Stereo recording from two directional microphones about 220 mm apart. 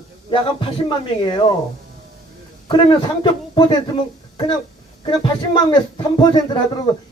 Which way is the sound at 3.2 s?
20° left (ahead or behind).